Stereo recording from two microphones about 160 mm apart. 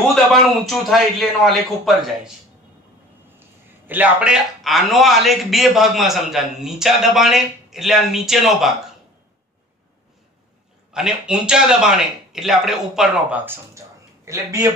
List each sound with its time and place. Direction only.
0.1 s a man's voice: centre (ahead or behind)
3.3 s a man's voice: 10° right (ahead or behind)
10.9 s a man's voice: 5° right (ahead or behind)
13.5 s a sound: 20° right (ahead or behind)